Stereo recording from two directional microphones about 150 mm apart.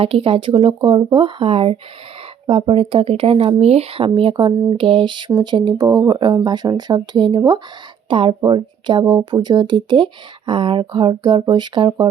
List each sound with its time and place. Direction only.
0.0 s speech: 40° right (ahead or behind)